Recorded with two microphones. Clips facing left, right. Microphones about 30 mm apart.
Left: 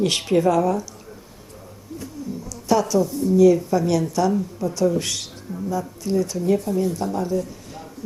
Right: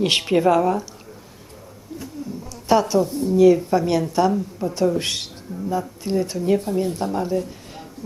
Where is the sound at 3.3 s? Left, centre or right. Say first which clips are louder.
Right 1 dB; right.